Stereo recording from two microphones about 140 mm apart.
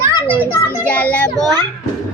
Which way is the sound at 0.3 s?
15° right (ahead or behind).